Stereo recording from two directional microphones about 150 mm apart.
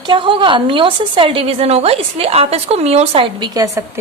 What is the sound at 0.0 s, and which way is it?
A woman's voice, 35° right (ahead or behind).